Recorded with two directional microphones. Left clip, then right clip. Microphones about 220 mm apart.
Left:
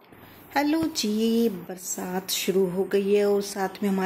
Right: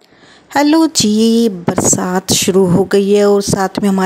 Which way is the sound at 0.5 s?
50° right (ahead or behind).